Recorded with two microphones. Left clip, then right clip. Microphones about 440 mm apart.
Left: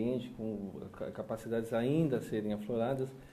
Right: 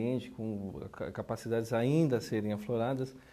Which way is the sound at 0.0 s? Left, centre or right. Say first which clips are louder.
Right 1 dB; right.